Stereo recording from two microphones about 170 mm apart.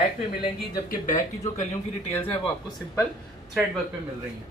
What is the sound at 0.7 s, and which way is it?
Speech, 50° left (ahead or behind).